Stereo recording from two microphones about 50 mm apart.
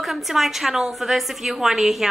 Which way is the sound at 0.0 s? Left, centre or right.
Centre.